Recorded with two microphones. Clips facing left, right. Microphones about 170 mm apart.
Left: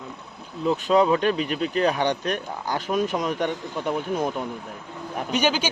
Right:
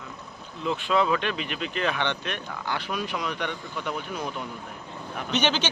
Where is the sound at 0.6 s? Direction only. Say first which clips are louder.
Left 5 dB; 40° left (ahead or behind).